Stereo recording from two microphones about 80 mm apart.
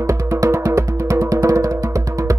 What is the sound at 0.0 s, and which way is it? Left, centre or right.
Music, right.